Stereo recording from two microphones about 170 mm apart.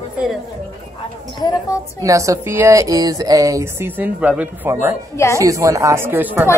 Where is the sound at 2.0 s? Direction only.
20° right (ahead or behind).